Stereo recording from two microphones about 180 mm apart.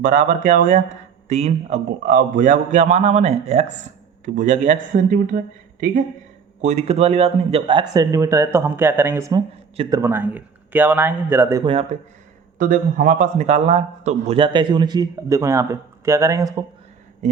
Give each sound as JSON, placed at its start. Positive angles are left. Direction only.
{"t": 0.0, "sound": "a man's voice", "side_deg": -45}
{"t": 6.6, "sound": "a man's voice", "side_deg": -40}
{"t": 9.7, "sound": "a man's voice", "side_deg": -30}
{"t": 10.0, "sound": "a man's voice", "side_deg": -10}
{"t": 11.6, "sound": "a man's voice", "side_deg": -30}
{"t": 12.5, "sound": "a man's voice", "side_deg": -45}